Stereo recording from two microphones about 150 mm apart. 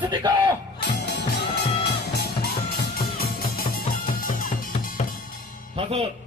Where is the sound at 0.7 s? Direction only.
90° left.